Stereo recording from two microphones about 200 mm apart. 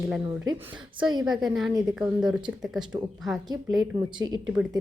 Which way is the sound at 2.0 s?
5° right (ahead or behind).